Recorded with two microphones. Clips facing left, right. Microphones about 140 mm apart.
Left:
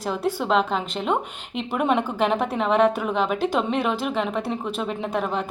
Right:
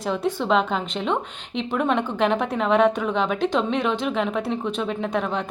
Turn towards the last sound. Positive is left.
turn(degrees=5)  # may be behind; listen again after turning